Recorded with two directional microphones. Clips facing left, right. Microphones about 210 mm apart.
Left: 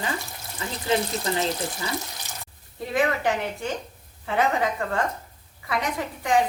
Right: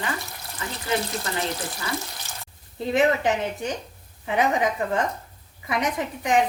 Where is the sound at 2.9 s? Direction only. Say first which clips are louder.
Right 3 dB; 20° right (ahead or behind).